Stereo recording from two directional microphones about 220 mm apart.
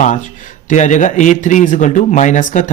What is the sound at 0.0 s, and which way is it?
Speech, 35° left (ahead or behind).